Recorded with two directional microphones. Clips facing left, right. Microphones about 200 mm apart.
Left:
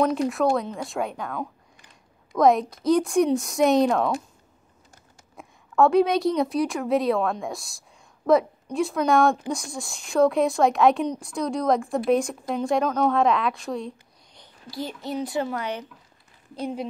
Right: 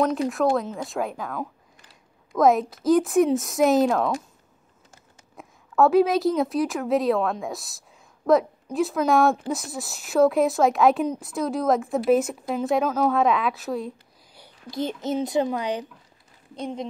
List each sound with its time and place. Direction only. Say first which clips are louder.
0.0 s speech: even; centre (ahead or behind)
14.7 s a child's voice: right 4 dB; 20° right (ahead or behind)
16.5 s speech: left 1 dB; 5° left (ahead or behind)